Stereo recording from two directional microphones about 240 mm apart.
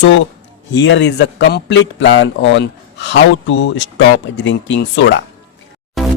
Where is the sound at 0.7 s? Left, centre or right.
Left.